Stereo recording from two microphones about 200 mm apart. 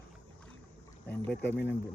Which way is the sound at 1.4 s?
60° left (ahead or behind).